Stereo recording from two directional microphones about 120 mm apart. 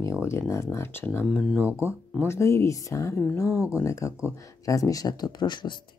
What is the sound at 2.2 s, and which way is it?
Speech, 25° left (ahead or behind).